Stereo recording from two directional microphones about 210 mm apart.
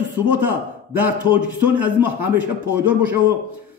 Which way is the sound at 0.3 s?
10° right (ahead or behind).